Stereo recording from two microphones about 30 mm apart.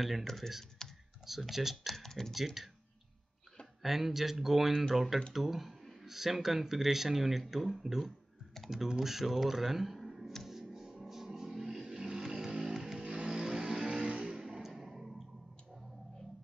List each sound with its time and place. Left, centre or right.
0.0 s speech: centre
0.8 s computer keyboard: centre
1.2 s speech: centre
1.9 s speech: centre
2.3 s speech: centre
3.8 s speech: centre
5.8 s a sound: centre
6.0 s speech: centre
10.4 s music: centre
12.3 s vehicle: right
13.0 s vehicle: right
14.0 s vehicle: right
14.3 s a sound: centre